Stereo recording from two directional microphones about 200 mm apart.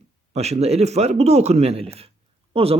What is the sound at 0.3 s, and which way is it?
Speech, 35° right (ahead or behind).